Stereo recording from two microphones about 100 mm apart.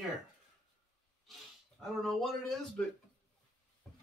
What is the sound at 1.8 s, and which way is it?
Speech, 5° left (ahead or behind).